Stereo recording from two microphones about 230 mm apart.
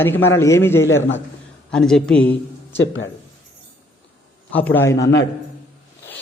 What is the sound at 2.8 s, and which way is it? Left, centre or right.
Speech, left.